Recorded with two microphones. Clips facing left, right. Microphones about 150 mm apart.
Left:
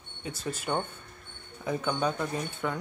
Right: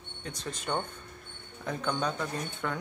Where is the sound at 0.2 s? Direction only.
5° left (ahead or behind).